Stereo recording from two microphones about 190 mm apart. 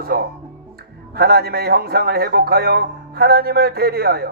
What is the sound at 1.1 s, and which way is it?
A man's voice, 55° right (ahead or behind).